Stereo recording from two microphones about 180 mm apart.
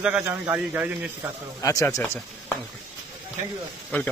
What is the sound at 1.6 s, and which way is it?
Speech, 20° left (ahead or behind).